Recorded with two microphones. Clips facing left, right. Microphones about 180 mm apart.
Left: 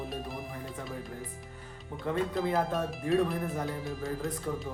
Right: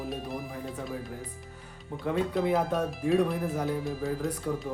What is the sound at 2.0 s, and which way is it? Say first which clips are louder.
Speech: right 3 dB; 5° right (ahead or behind).